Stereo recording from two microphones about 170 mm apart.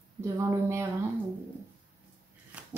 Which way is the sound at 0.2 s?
15° right (ahead or behind).